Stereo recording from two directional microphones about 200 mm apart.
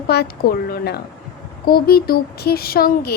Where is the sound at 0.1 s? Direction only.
50° left (ahead or behind).